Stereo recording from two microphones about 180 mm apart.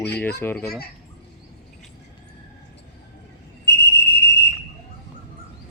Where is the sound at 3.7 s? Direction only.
70° left (ahead or behind).